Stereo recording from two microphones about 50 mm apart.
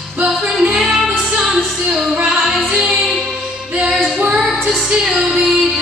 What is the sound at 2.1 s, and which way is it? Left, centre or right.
Music, right.